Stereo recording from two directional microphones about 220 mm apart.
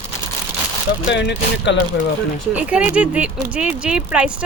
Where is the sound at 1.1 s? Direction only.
55° left (ahead or behind).